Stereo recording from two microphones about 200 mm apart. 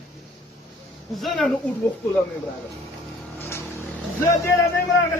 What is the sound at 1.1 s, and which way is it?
Speech, centre (ahead or behind).